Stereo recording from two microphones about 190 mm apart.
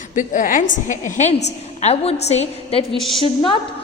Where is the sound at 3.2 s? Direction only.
30° left (ahead or behind).